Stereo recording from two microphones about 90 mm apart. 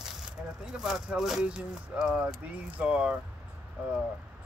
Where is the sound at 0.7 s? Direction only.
5° right (ahead or behind).